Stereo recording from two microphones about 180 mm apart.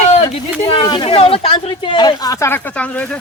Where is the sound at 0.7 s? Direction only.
25° left (ahead or behind).